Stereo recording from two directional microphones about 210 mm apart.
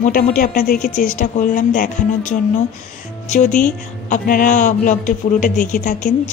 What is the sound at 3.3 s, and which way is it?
Speech, 35° left (ahead or behind).